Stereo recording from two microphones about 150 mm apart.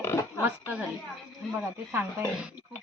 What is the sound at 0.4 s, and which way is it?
Speech, 10° right (ahead or behind).